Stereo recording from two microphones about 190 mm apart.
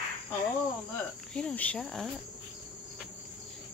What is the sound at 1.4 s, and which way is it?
Speech, 5° left (ahead or behind).